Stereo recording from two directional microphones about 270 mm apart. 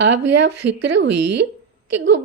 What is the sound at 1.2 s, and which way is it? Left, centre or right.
Speech, right.